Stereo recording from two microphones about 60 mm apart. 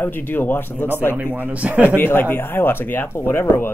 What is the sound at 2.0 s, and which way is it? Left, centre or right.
Speech, left.